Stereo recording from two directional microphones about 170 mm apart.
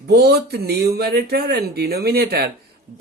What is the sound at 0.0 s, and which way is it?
Speech, 70° right (ahead or behind).